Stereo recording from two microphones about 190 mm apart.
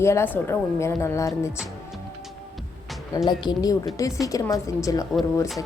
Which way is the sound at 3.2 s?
20° left (ahead or behind).